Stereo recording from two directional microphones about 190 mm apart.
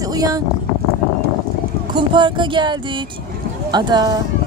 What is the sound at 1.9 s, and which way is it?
Speech, 25° right (ahead or behind).